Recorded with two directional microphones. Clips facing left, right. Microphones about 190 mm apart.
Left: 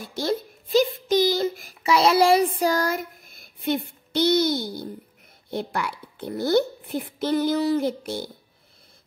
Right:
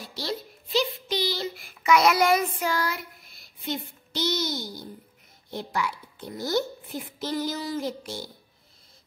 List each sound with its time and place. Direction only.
0.0 s a child's voice: 50° left (ahead or behind)